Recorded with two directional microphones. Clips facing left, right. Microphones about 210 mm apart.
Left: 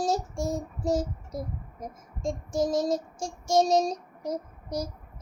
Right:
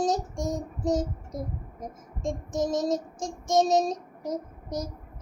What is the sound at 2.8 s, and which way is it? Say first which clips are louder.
Child singing: even; 30° left (ahead or behind).